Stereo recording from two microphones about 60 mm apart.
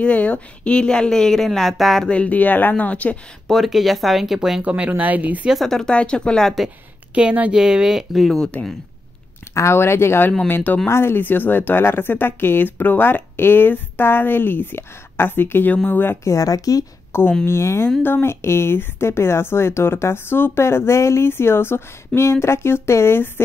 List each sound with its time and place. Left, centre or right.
0.0 s speech: left; by 2.0 s centre
2.0 s speech: left
3.4 s speech: centre
4.6 s speech: right
5.7 s speech: centre
7.2 s speech: right
8.2 s speech: centre
9.5 s speech: left
10.5 s speech: left
10.9 s speech: left
16.3 s speech: left
17.1 s speech: left